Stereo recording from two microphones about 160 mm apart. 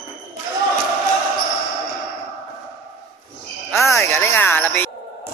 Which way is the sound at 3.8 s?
15° left (ahead or behind).